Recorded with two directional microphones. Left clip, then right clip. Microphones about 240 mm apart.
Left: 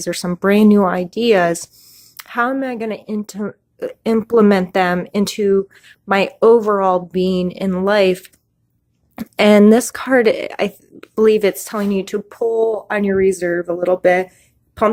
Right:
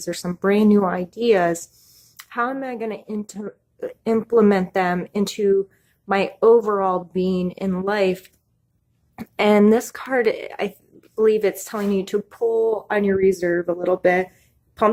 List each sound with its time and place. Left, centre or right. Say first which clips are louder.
0.0 s speech: left 5 dB; left